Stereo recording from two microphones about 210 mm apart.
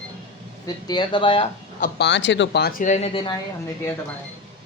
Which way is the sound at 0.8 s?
20° left (ahead or behind).